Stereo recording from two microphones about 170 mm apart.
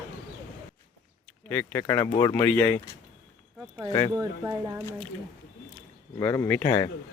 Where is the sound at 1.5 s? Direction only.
15° left (ahead or behind).